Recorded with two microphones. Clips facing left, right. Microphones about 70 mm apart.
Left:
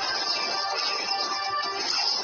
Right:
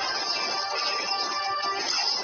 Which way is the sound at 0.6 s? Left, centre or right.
Right.